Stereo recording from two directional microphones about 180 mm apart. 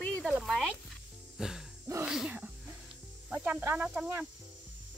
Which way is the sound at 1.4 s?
Centre (ahead or behind).